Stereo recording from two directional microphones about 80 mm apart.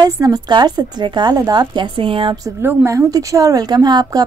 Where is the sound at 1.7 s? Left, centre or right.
Right.